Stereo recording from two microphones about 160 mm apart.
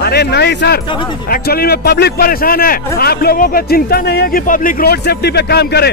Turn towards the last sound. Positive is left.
turn(degrees=90)